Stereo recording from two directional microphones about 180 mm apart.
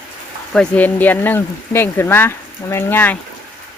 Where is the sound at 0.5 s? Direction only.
10° left (ahead or behind).